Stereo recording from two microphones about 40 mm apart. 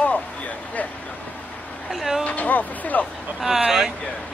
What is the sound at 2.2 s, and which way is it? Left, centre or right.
Vehicle, left.